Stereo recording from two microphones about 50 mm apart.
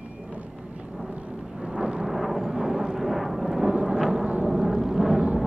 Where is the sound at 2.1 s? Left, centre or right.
Centre.